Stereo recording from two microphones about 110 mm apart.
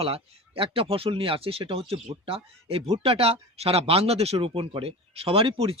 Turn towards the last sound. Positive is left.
turn(degrees=-60)  # may be behind; listen again after turning